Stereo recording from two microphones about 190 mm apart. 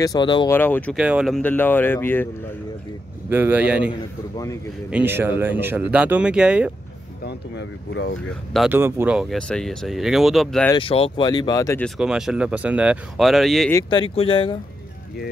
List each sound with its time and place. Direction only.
0.0 s speech: 20° left (ahead or behind)
0.5 s speech: 10° left (ahead or behind)
0.9 s speech: 5° right (ahead or behind); by 2.2 s 10° left (ahead or behind)
3.3 s speech: 10° right (ahead or behind)
4.9 s speech: 10° right (ahead or behind)
7.2 s speech: 65° left (ahead or behind)
8.5 s speech: 10° right (ahead or behind)
10.7 s speech: 30° left (ahead or behind)
11.8 s speech: 5° right (ahead or behind)
13.8 s speech: 25° left (ahead or behind)